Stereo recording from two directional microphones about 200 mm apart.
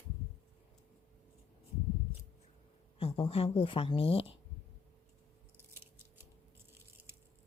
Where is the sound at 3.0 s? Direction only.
30° left (ahead or behind).